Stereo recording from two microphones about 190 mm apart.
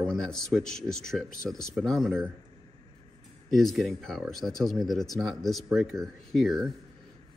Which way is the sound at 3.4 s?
Centre (ahead or behind).